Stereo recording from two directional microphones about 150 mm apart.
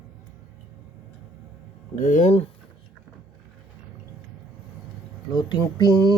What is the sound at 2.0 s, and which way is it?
Speech, 55° left (ahead or behind).